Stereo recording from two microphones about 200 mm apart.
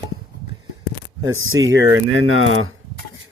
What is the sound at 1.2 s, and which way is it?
Speech, 80° right.